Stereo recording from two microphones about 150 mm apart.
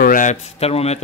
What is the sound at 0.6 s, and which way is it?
Speech, 45° left (ahead or behind).